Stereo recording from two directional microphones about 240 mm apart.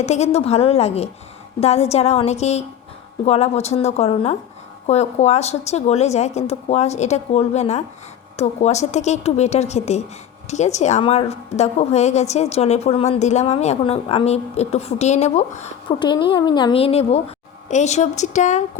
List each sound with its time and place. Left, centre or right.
0.0 s a woman's voice: left